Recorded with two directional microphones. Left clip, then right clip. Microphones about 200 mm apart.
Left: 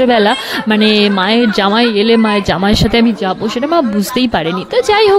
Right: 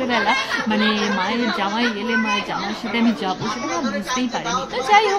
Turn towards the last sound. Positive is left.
turn(degrees=40)  # may be behind; listen again after turning